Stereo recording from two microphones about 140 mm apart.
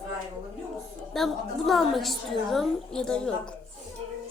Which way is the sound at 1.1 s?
Centre (ahead or behind).